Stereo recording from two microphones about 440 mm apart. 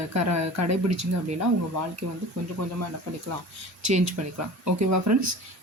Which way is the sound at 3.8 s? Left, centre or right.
Right.